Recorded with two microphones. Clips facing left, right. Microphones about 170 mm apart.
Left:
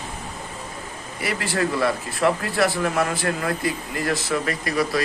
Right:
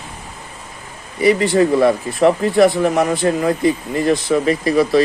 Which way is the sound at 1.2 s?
20° right (ahead or behind).